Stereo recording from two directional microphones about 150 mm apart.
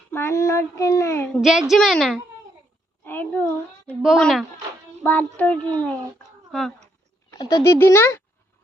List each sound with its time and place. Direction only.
0.1 s a child's voice: 15° left (ahead or behind)
1.3 s a woman's voice: centre (ahead or behind)
3.0 s a sound: 15° left (ahead or behind)
4.0 s a woman's voice: centre (ahead or behind)
7.3 s a child's voice: 25° left (ahead or behind)